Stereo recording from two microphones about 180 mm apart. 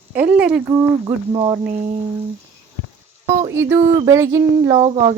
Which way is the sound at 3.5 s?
15° right (ahead or behind).